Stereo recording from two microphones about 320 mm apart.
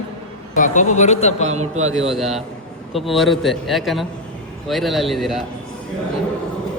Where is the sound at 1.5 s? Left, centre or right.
Right.